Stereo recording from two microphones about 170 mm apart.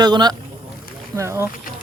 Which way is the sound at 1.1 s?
15° right (ahead or behind).